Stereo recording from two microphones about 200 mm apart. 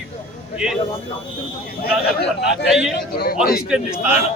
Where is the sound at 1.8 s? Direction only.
55° left (ahead or behind).